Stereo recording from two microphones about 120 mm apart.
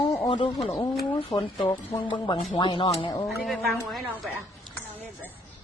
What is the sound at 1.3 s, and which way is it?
Speech, 20° left (ahead or behind).